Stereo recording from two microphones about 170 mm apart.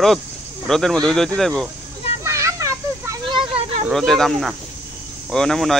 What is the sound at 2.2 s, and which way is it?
Children playing, 15° right (ahead or behind).